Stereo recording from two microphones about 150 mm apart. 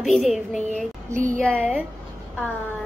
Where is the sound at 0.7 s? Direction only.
55° right (ahead or behind).